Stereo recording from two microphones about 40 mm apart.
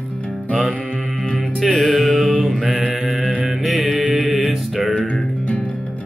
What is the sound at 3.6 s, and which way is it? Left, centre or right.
Music, centre.